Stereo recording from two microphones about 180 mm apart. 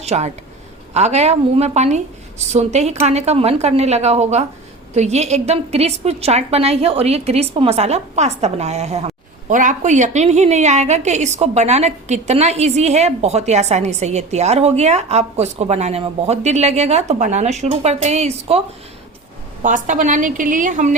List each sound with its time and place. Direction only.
0.0 s a woman's voice: 40° right (ahead or behind)
19.6 s a woman's voice: 45° right (ahead or behind)